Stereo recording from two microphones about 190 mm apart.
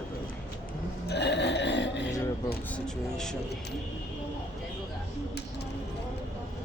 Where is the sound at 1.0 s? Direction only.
65° left (ahead or behind).